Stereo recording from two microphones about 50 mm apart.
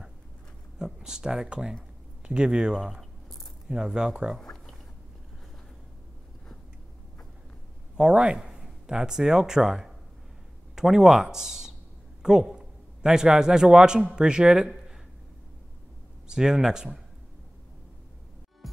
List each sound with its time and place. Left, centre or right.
0.7 s speech: centre
4.4 s a sound: centre
7.9 s a man's voice: centre
16.3 s speech: centre